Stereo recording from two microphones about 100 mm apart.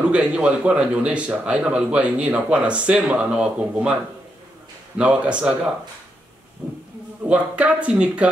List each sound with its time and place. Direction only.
0.1 s speech: 10° right (ahead or behind)
6.6 s speech: 20° right (ahead or behind)